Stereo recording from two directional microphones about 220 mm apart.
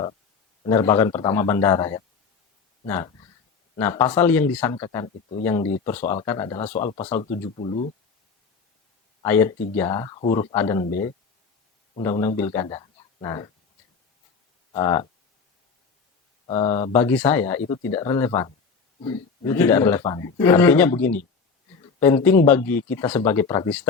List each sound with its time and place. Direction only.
0.6 s a man's voice: 15° left (ahead or behind)
6.0 s speech: 35° left (ahead or behind)
6.2 s a man's voice: 20° left (ahead or behind)
6.7 s speech: 30° left (ahead or behind)
9.2 s a man's voice: 10° left (ahead or behind)
11.9 s a man's voice: 15° left (ahead or behind)
14.7 s speech: 20° left (ahead or behind)
16.5 s speech: 30° left (ahead or behind)
16.9 s a man's voice: 10° left (ahead or behind)
22.0 s a man's voice: 10° left (ahead or behind)